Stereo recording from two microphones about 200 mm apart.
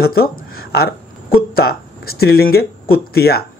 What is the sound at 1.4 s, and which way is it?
Speech, 50° left (ahead or behind).